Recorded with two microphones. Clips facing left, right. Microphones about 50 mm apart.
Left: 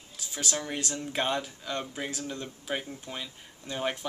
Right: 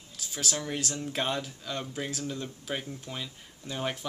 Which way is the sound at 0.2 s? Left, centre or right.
Centre.